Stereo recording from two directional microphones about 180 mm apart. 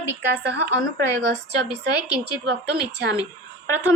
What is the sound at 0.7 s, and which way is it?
Speech, 75° right (ahead or behind).